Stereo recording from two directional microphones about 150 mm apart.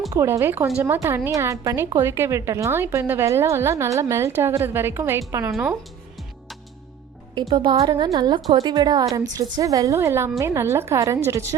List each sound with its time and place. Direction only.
0.1 s a woman's voice: 20° right (ahead or behind)
7.3 s a woman's voice: 30° right (ahead or behind)